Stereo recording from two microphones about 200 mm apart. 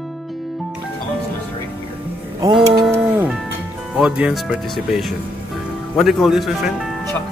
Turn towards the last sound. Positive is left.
turn(degrees=0)  # may be behind; listen again after turning